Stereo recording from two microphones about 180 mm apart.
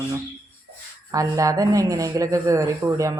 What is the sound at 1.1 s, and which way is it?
Speech, 20° right (ahead or behind).